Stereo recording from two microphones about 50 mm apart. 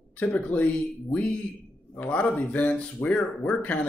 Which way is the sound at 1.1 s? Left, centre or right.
Left.